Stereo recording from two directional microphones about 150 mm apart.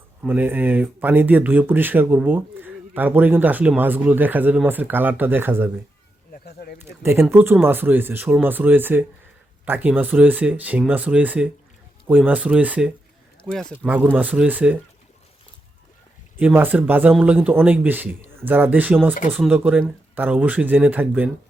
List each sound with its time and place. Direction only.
0.2 s speech: 10° right (ahead or behind)
6.3 s a sound: 90° left
6.8 s speech: 15° right (ahead or behind)
13.5 s speech: 5° left (ahead or behind)
13.7 s speech: 10° right (ahead or behind)
16.4 s speech: 15° right (ahead or behind)